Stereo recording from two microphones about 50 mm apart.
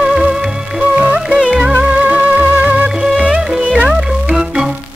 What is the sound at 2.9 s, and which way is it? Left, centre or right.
Music, centre.